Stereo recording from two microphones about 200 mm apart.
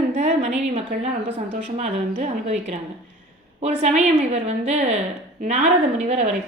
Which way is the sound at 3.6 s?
35° right (ahead or behind).